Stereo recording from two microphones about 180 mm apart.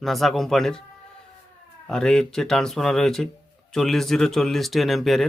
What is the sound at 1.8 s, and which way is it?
A man's voice, 5° left (ahead or behind).